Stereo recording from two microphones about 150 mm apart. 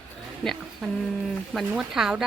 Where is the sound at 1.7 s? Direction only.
5° right (ahead or behind).